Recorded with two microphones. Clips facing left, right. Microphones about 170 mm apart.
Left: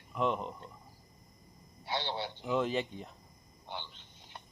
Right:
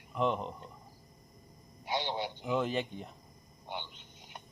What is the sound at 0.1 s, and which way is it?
Speech, centre (ahead or behind).